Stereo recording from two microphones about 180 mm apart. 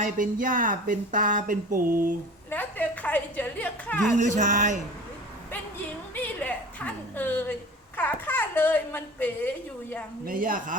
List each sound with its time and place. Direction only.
0.0 s speech: 50° right (ahead or behind)
2.5 s a woman's voice: 10° left (ahead or behind)
4.2 s speech: 45° right (ahead or behind)
6.2 s a woman's voice: 10° left (ahead or behind)
10.2 s speech: 50° right (ahead or behind)